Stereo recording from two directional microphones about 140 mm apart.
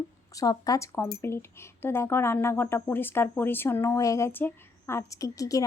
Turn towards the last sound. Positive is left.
turn(degrees=25)  # may be behind; listen again after turning